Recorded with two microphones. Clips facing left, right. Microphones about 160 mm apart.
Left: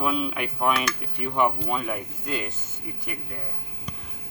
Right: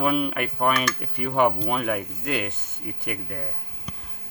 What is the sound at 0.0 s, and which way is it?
Speech, 60° right (ahead or behind).